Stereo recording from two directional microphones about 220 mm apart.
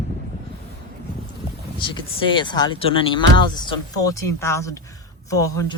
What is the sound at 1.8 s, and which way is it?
Speech, 20° left (ahead or behind).